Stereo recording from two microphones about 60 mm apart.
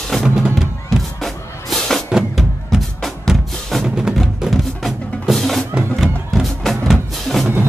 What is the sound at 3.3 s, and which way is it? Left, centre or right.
Music, centre.